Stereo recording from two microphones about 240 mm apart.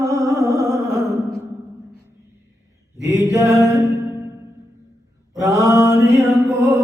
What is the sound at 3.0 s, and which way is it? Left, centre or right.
Mantra, centre.